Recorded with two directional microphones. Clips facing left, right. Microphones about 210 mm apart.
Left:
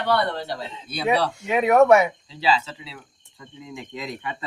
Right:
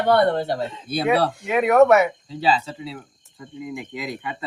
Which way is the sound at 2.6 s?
50° right (ahead or behind).